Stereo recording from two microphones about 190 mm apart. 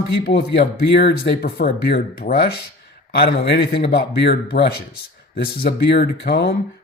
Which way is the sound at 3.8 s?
60° left (ahead or behind).